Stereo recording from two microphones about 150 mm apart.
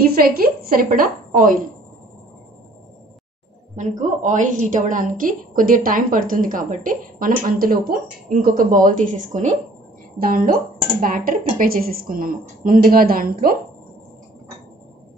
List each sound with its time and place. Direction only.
0.0 s a woman's voice: 80° right
3.7 s a woman's voice: 55° right (ahead or behind)
10.1 s speech: 75° right (ahead or behind)